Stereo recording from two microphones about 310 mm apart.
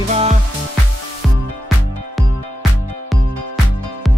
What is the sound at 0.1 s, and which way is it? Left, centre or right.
Music, right.